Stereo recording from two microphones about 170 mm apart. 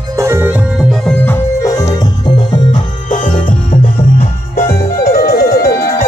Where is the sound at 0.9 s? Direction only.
5° left (ahead or behind).